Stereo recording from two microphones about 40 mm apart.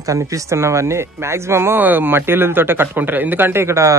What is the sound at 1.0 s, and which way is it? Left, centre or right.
Speech, right.